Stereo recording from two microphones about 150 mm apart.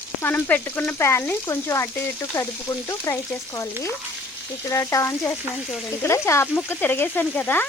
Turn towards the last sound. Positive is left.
turn(degrees=10)  # may be behind; listen again after turning